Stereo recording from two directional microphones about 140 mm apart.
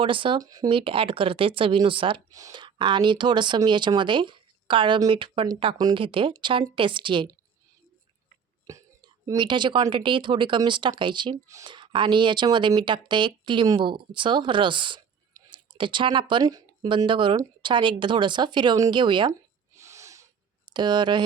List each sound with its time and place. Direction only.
0.0 s speech: 40° right (ahead or behind)
0.7 s speech: 40° right (ahead or behind)
8.7 s whispering: 25° right (ahead or behind)
9.2 s speech: 35° right (ahead or behind)
19.3 s a sound: 20° right (ahead or behind)
20.7 s speech: 30° right (ahead or behind)